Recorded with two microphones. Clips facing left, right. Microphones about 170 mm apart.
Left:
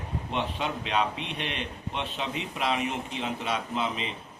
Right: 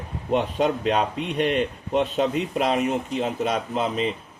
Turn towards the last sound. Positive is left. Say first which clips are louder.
# right 6 dB
turn(degrees=-45)  # may be behind; listen again after turning